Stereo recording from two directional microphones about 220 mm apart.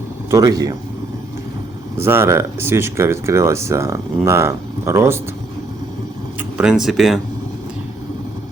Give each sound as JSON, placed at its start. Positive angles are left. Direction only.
{"t": 0.3, "sound": "speech", "side_deg": -15}
{"t": 2.0, "sound": "speech", "side_deg": -10}
{"t": 6.6, "sound": "speech", "side_deg": -5}